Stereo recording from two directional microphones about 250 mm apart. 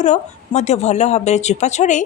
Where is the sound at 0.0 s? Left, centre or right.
Left.